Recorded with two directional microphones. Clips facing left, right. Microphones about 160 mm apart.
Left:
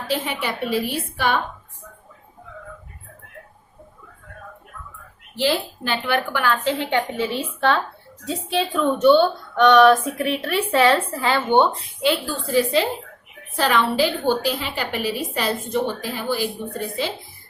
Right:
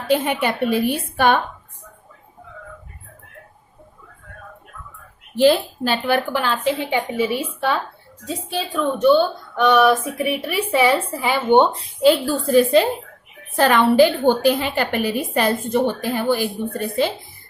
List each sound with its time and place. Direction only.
0.1 s a woman's voice: 55° right (ahead or behind)
5.4 s a woman's voice: 45° right (ahead or behind)
6.3 s a woman's voice: 25° right (ahead or behind)
6.7 s a woman's voice: 10° right (ahead or behind)
8.3 s a woman's voice: centre (ahead or behind); by 11.7 s 15° right (ahead or behind)
12.5 s a woman's voice: 50° right (ahead or behind)